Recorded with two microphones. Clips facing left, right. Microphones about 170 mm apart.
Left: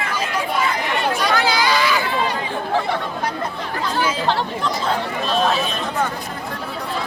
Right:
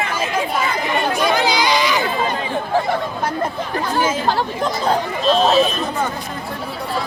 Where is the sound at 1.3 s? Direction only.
15° right (ahead or behind).